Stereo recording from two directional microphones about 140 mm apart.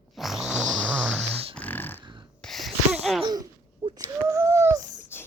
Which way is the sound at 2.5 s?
Centre (ahead or behind).